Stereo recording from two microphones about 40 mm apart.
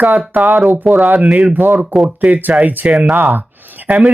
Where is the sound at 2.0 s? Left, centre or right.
Right.